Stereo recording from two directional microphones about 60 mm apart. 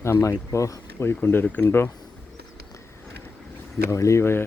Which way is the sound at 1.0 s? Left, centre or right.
Left.